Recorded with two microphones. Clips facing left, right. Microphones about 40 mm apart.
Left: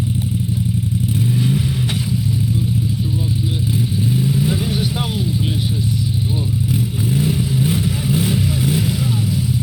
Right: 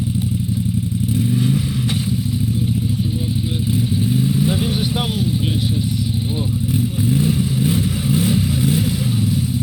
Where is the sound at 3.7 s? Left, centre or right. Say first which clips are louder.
Right 1 dB; left.